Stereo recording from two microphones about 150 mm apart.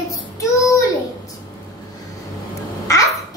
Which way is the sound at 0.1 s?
20° left (ahead or behind).